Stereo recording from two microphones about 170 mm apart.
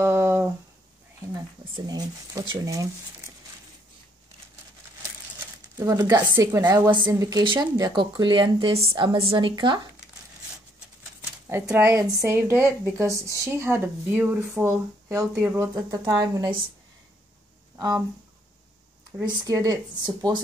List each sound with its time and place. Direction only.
0.0 s a sound: 15° right (ahead or behind)
1.9 s a woman's voice: 25° right (ahead or behind)
5.8 s a woman's voice: 20° right (ahead or behind)
11.4 s speech: 10° right (ahead or behind)
19.2 s a woman's voice: 20° right (ahead or behind)